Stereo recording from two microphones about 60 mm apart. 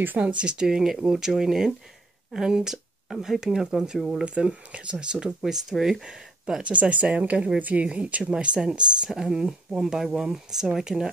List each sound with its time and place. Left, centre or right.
0.0 s speech: right
0.4 s speech: centre